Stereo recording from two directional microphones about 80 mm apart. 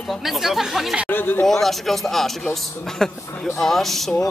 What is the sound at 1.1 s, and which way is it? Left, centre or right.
Speech, left.